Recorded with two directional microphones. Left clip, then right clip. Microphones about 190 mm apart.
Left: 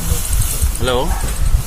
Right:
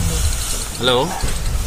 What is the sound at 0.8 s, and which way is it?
Speech, centre (ahead or behind).